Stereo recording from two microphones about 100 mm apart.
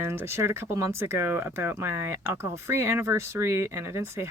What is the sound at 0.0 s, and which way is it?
Speech, 25° right (ahead or behind).